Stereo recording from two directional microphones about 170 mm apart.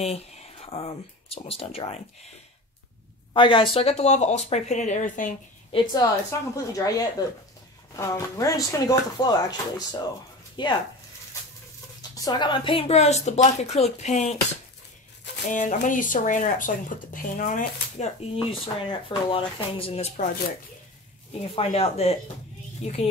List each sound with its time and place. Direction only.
0.0 s speech: 40° left (ahead or behind)
3.3 s speech: 30° left (ahead or behind); by 5.3 s 50° left (ahead or behind)
5.7 s speech: 30° left (ahead or behind)
12.3 s speech: 25° left (ahead or behind)
15.4 s speech: 50° left (ahead or behind)
21.4 s speech: 35° left (ahead or behind)